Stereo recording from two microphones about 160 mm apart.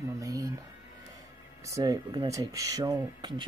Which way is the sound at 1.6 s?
20° right (ahead or behind).